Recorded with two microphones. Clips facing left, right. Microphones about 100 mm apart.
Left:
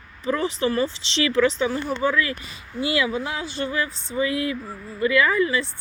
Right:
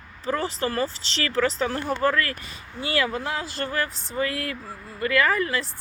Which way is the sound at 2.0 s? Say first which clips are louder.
Even; 65° right (ahead or behind).